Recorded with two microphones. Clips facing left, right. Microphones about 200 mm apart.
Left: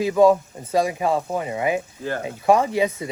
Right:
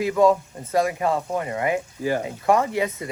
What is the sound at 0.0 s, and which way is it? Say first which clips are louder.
Speech: left 2 dB; 25° left (ahead or behind).